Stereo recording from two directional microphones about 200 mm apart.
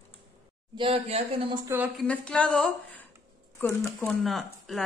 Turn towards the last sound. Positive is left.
turn(degrees=0)  # may be behind; listen again after turning